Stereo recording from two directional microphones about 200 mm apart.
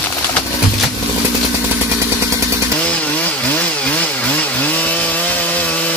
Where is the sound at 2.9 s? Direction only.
5° left (ahead or behind).